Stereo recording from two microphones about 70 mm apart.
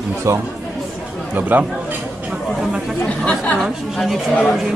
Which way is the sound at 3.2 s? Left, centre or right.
Centre.